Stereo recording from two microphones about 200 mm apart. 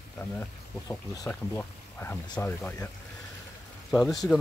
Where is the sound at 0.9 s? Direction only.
10° left (ahead or behind).